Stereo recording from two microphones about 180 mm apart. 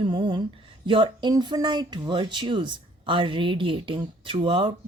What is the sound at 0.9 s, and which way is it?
Speech, 30° right (ahead or behind).